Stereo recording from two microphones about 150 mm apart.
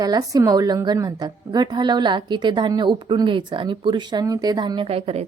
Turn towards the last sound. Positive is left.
turn(degrees=-40)  # may be behind; listen again after turning